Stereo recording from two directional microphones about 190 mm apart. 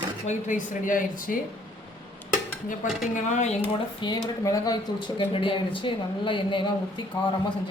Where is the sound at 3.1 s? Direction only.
40° left (ahead or behind).